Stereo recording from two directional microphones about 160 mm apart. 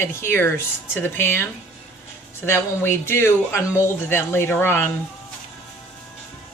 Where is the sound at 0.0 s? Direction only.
15° left (ahead or behind).